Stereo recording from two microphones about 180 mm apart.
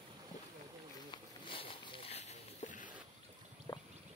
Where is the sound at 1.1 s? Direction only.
30° left (ahead or behind); by 2.9 s 45° left (ahead or behind).